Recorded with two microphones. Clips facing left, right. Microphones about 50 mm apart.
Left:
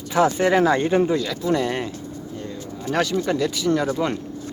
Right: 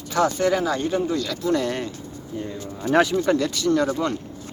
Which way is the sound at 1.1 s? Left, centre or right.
Centre.